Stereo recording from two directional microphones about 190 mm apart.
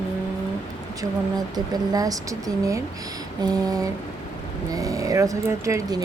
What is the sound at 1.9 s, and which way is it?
A woman's voice, 20° right (ahead or behind).